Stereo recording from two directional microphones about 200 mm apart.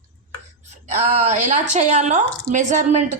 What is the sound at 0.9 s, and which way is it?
A woman's voice, 35° right (ahead or behind).